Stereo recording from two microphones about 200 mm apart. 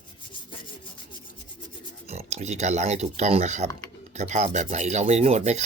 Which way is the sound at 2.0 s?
35° right (ahead or behind).